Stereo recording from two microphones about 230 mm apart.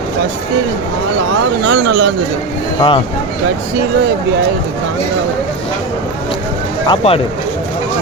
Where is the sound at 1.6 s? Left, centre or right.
Right.